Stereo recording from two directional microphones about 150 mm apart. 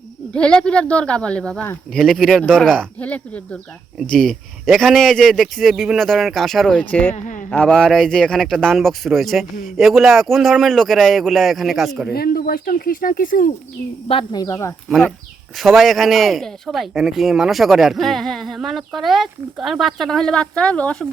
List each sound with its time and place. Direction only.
0.3 s speech: 5° left (ahead or behind)
12.1 s speech: 90° left; by 13.5 s 70° left (ahead or behind)
14.3 s speech: 25° left (ahead or behind)
14.8 s speech: 5° left (ahead or behind)